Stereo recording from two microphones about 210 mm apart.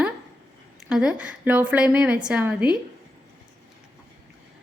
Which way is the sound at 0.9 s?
5° right (ahead or behind).